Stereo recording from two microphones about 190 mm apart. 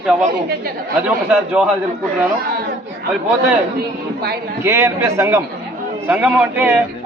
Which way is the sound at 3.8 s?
55° right (ahead or behind).